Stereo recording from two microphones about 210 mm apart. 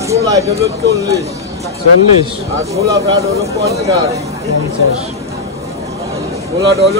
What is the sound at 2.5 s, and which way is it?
Speech, 15° right (ahead or behind).